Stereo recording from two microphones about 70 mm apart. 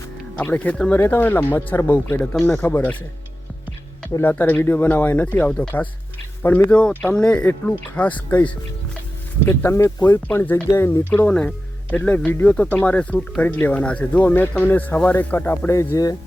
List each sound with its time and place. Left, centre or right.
0.5 s speech: left
0.9 s speech: left
4.2 s speech: left
9.6 s speech: left
10.0 s speech: left
10.5 s speech: left
11.3 s speech: centre
15.9 s speech: left